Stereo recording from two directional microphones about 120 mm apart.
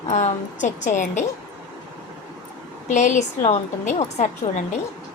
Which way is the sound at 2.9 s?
85° left.